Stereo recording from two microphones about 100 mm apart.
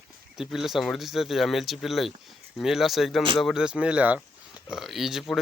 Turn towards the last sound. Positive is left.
turn(degrees=-5)  # may be behind; listen again after turning